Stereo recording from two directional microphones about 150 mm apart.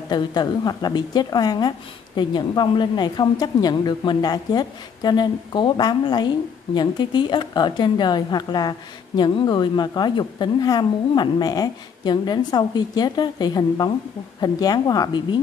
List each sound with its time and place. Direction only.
0.1 s a woman's voice: 30° left (ahead or behind)